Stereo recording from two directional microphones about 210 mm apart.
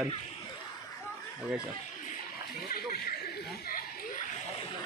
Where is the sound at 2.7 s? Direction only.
45° left (ahead or behind).